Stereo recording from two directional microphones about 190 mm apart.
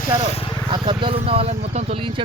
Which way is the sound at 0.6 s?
25° right (ahead or behind).